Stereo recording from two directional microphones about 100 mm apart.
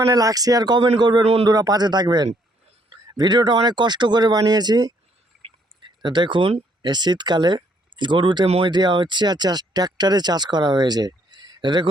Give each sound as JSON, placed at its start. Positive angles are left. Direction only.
{"t": 0.1, "sound": "speech", "side_deg": -35}
{"t": 1.2, "sound": "speech", "side_deg": -90}
{"t": 1.5, "sound": "speech", "side_deg": -40}
{"t": 6.0, "sound": "speech", "side_deg": -50}